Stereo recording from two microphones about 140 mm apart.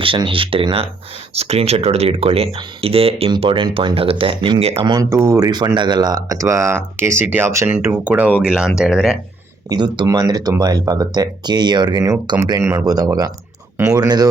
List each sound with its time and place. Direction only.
0.0 s speech: 40° right (ahead or behind); by 9.1 s 5° right (ahead or behind)
9.6 s speech: 30° right (ahead or behind)